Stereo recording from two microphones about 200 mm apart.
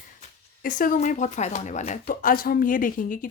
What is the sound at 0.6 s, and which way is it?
Speech, 45° left (ahead or behind).